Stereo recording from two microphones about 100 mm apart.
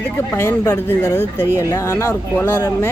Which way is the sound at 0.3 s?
25° left (ahead or behind).